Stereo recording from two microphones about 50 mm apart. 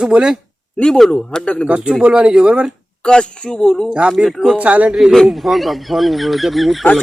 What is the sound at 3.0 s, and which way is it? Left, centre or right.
Speech, centre.